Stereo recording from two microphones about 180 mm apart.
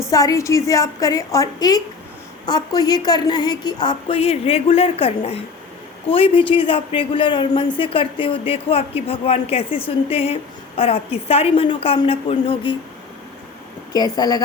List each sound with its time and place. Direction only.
0.1 s a woman's voice: 20° left (ahead or behind)
13.9 s a woman's voice: 20° left (ahead or behind)